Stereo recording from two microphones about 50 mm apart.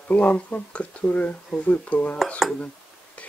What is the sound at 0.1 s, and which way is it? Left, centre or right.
Speech, left.